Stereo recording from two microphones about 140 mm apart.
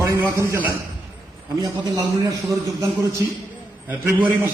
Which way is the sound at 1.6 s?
30° right (ahead or behind).